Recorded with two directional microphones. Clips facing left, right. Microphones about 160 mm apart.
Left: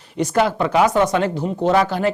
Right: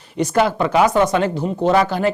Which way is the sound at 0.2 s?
10° right (ahead or behind).